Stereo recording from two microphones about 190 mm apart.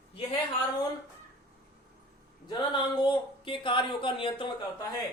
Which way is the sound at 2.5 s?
25° left (ahead or behind).